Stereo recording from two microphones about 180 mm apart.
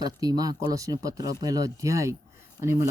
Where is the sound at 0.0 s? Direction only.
20° right (ahead or behind).